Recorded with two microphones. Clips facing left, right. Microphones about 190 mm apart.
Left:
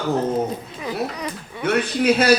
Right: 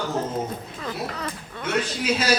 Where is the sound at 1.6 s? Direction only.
60° left (ahead or behind).